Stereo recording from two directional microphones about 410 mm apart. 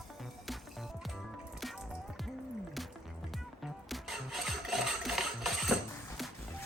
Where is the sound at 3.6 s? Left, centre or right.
Centre.